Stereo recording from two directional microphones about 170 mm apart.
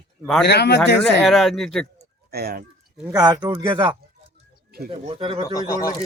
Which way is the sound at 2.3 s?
65° right (ahead or behind).